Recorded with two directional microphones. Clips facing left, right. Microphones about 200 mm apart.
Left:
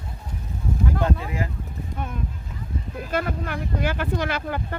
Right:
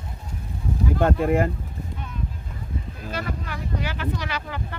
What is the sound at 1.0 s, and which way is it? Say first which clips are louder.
Speech: right 10 dB; 55° right (ahead or behind).